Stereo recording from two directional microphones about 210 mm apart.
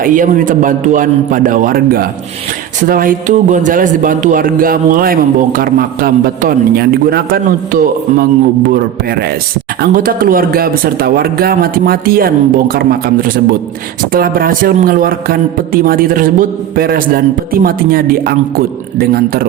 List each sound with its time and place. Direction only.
0.0 s a man's voice: 40° right (ahead or behind)